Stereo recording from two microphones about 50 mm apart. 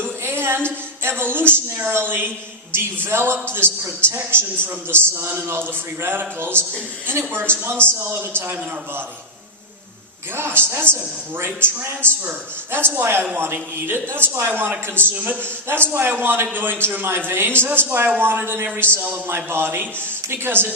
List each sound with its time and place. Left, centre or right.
0.0 s a sound: right
1.9 s a man's voice: right
3.6 s a man's voice: left
4.1 s a man's voice: right
10.3 s a man's voice: right
15.7 s a man's voice: right